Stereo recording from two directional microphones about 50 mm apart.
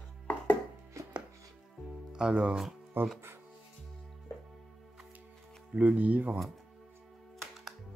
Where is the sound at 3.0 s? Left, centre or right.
Right.